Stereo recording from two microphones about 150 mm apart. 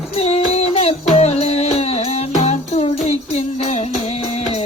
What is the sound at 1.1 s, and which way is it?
Music, 45° left (ahead or behind).